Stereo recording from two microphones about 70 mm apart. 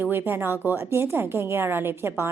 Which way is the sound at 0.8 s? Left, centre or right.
Right.